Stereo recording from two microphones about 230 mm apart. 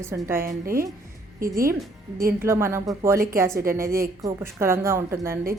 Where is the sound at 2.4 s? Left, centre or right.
Centre.